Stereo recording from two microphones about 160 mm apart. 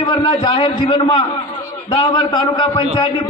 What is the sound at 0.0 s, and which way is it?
A man's voice, 30° left (ahead or behind).